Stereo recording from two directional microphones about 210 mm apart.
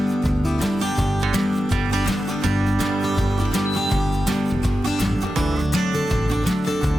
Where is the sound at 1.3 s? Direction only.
Centre (ahead or behind).